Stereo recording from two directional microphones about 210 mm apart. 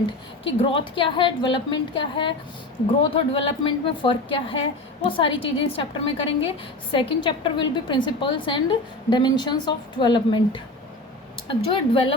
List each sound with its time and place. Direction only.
0.4 s a woman's voice: 25° left (ahead or behind)